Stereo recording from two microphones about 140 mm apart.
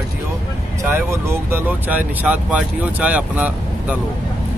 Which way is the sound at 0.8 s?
20° right (ahead or behind).